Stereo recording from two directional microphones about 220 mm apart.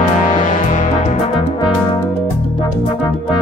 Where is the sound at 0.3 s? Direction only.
35° left (ahead or behind).